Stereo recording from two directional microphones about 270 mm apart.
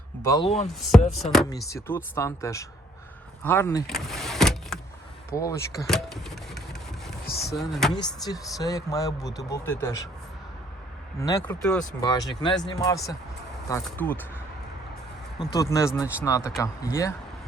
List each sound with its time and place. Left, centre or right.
0.2 s speech: centre
0.7 s speech: centre
3.9 s vehicle: centre
5.3 s speech: centre
5.8 s a sound: centre
7.3 s speech: left
7.5 s speech: centre
8.2 s speech: centre
11.2 s speech: centre
15.5 s speech: centre